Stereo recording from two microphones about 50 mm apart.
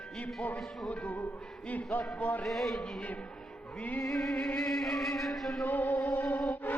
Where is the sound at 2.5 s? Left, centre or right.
Centre.